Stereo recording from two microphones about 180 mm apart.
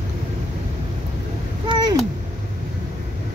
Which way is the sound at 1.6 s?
25° right (ahead or behind).